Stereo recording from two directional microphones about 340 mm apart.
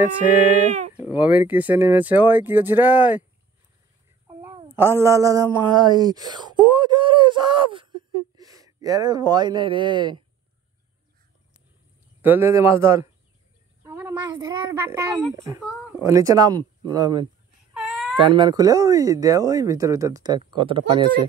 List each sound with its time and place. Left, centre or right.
0.7 s a sound: right
0.9 s speech: centre
4.3 s speech: centre
12.2 s a child's voice: centre
17.7 s baby cry: centre
18.1 s a child's voice: centre